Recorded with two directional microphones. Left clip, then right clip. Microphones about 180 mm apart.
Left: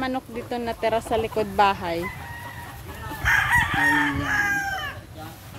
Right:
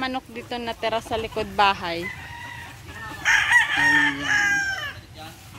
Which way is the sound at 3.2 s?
55° left (ahead or behind).